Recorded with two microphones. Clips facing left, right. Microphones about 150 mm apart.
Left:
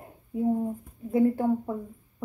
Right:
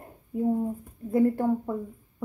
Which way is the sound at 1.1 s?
Centre (ahead or behind).